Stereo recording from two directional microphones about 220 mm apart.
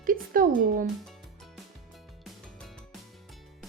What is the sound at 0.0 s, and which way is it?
Speech, 40° right (ahead or behind).